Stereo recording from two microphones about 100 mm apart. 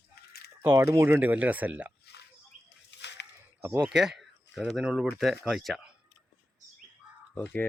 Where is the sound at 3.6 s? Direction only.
10° right (ahead or behind).